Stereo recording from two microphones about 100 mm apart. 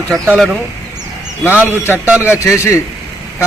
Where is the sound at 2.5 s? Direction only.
30° left (ahead or behind).